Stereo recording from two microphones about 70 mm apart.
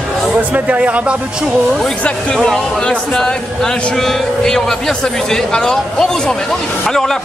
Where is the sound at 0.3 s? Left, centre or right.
Right.